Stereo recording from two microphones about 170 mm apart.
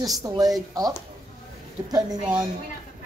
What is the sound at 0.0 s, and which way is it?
Speech, 20° right (ahead or behind).